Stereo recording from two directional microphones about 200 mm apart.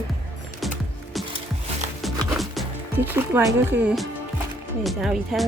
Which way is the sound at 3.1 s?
10° right (ahead or behind).